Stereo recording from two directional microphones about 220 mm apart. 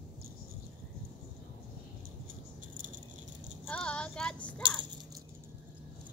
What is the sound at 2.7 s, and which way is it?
Rattle, 35° right (ahead or behind).